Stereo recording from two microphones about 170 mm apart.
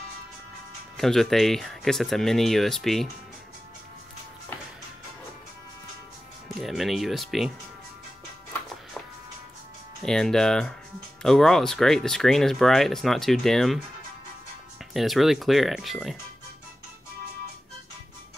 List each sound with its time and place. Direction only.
0.9 s speech: centre (ahead or behind)
6.6 s speech: centre (ahead or behind)
10.0 s speech: 5° left (ahead or behind)
15.0 s speech: centre (ahead or behind)